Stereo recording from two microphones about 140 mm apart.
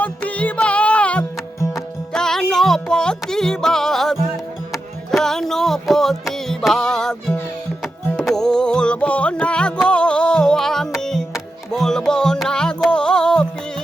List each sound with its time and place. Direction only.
0.0 s music: 10° left (ahead or behind)